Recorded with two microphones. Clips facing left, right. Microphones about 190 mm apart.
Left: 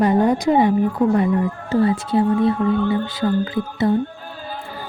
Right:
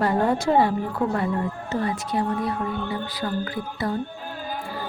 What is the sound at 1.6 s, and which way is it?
Speech, 30° left (ahead or behind).